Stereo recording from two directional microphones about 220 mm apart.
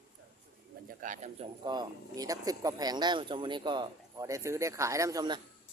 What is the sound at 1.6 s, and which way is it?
Speech, 15° right (ahead or behind).